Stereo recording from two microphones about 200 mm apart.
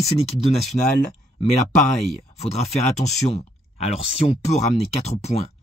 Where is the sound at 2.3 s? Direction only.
35° left (ahead or behind).